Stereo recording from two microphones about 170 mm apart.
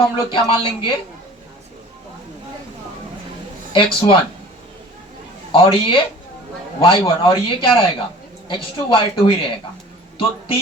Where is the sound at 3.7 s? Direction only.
30° left (ahead or behind).